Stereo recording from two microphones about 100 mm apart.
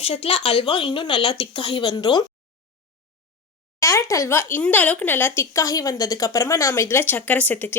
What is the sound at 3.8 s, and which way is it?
Speech, 30° left (ahead or behind).